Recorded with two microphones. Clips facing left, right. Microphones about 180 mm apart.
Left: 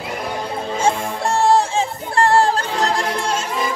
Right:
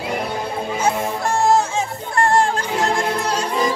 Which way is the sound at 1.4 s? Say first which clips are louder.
Left 2 dB; 30° left (ahead or behind).